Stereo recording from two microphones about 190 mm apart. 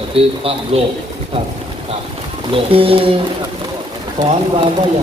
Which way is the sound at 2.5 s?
30° right (ahead or behind).